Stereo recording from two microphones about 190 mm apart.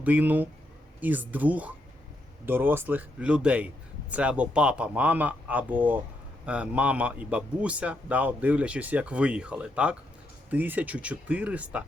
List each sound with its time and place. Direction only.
0.0 s speech: 10° right (ahead or behind)